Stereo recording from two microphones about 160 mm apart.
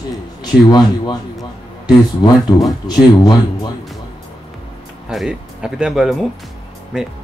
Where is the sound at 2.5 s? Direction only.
20° left (ahead or behind).